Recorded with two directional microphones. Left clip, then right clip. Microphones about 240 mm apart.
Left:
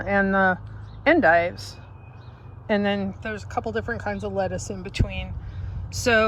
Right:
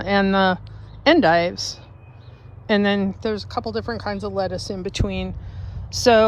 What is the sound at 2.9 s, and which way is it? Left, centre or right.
Speech, centre.